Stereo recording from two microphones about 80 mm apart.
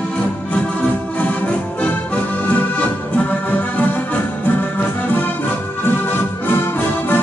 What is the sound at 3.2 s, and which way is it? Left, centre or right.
Organ, left.